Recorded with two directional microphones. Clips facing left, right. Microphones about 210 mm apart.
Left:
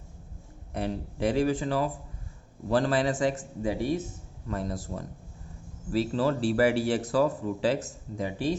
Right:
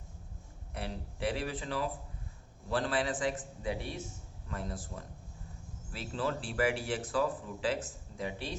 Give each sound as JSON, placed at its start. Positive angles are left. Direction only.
{"t": 0.7, "sound": "speech", "side_deg": 40}